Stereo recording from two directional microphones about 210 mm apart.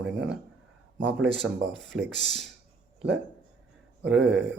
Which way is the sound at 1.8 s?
Centre (ahead or behind).